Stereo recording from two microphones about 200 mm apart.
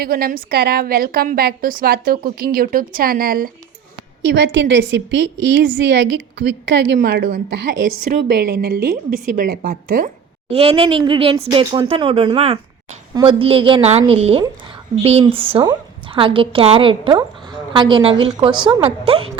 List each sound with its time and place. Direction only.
0.0 s a woman's voice: 50° right (ahead or behind)
4.3 s a woman's voice: 60° right (ahead or behind); by 10.1 s 45° right (ahead or behind)
10.5 s a woman's voice: 30° right (ahead or behind)